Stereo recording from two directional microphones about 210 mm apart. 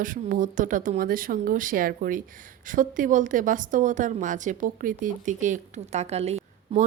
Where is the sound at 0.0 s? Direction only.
40° right (ahead or behind).